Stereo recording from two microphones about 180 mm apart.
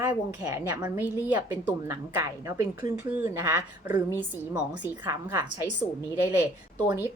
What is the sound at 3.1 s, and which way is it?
A woman's voice, 10° right (ahead or behind).